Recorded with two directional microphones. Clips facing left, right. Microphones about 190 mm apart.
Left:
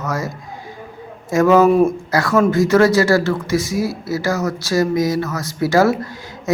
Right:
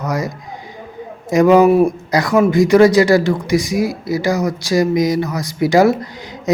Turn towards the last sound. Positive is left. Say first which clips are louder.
# right 3 dB
turn(degrees=-15)  # may be behind; listen again after turning